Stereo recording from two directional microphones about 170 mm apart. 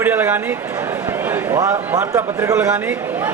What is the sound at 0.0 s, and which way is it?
A man's voice, 10° right (ahead or behind).